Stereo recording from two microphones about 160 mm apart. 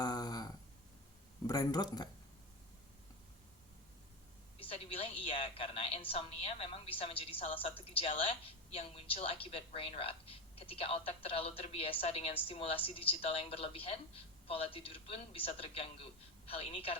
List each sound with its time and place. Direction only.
0.0 s a sound: 25° left (ahead or behind)
1.5 s speech: 25° left (ahead or behind)
4.6 s a woman's voice: 35° left (ahead or behind)